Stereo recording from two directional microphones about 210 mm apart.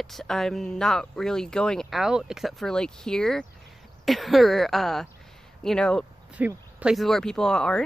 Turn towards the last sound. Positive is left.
turn(degrees=5)  # may be behind; listen again after turning